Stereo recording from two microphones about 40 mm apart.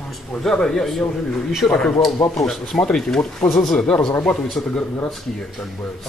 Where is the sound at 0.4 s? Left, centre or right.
Centre.